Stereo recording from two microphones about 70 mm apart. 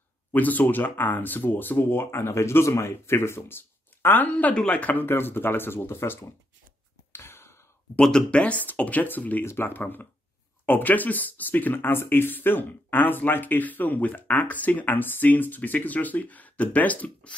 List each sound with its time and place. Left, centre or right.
0.3 s speech: left
5.0 s speech: left
7.1 s a sound: left
8.0 s speech: centre